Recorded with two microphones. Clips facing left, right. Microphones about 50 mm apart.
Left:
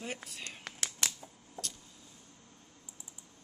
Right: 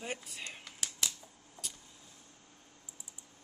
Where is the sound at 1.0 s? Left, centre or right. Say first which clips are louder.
Left 1 dB; left.